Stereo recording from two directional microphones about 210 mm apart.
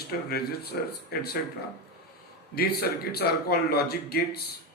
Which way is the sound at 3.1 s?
50° left (ahead or behind).